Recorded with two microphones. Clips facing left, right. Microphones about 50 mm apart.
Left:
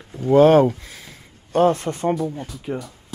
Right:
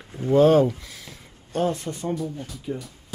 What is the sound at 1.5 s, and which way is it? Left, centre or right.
Speech, left.